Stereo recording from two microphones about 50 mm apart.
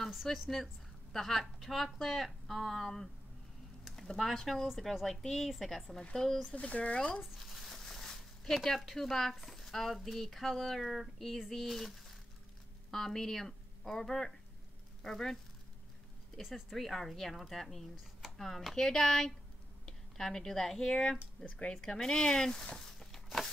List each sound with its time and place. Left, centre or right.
0.1 s a woman's voice: centre
3.8 s a sound: centre
4.2 s speech: centre
6.1 s speech: centre
6.5 s speech: left
7.3 s a sound: centre
8.6 s a woman's voice: centre
16.3 s a woman's voice: centre
21.5 s speech: left
21.8 s speech: centre
22.8 s a sound: centre